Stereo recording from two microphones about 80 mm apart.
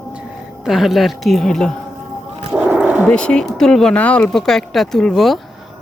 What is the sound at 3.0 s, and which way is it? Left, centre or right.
Speech, centre.